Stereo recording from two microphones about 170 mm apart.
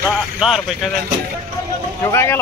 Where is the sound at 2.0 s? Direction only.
15° left (ahead or behind).